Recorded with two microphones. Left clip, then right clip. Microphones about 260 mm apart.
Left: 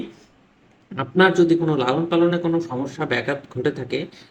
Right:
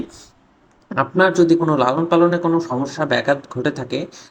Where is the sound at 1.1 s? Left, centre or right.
Centre.